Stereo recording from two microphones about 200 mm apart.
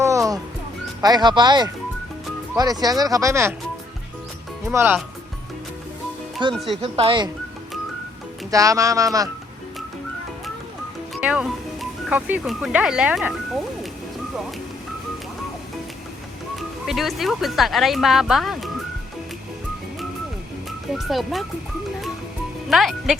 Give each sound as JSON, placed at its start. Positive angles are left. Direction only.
{"t": 0.0, "sound": "music", "side_deg": -15}
{"t": 1.0, "sound": "speech", "side_deg": -20}
{"t": 4.6, "sound": "speech", "side_deg": -10}
{"t": 6.5, "sound": "speech", "side_deg": 0}
{"t": 6.8, "sound": "speech", "side_deg": -25}
{"t": 8.4, "sound": "speech", "side_deg": -15}
{"t": 11.1, "sound": "speech", "side_deg": -5}
{"t": 16.6, "sound": "speech", "side_deg": 0}
{"t": 20.7, "sound": "speech", "side_deg": 0}
{"t": 22.7, "sound": "speech", "side_deg": 0}